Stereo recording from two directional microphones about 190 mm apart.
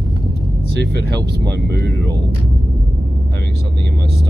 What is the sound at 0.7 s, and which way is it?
Speech, 60° right (ahead or behind).